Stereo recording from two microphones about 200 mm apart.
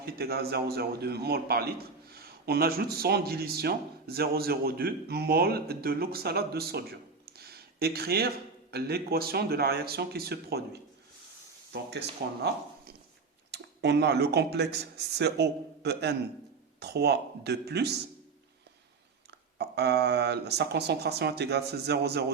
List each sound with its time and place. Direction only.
0.0 s a man's voice: 50° right (ahead or behind)
7.3 s a sound: 50° right (ahead or behind)
8.7 s a man's voice: 50° right (ahead or behind)
13.5 s speech: 55° right (ahead or behind)
19.3 s speech: 55° right (ahead or behind)